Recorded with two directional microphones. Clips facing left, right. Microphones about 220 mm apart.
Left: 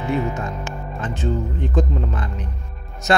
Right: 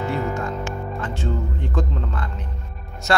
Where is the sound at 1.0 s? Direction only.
20° left (ahead or behind).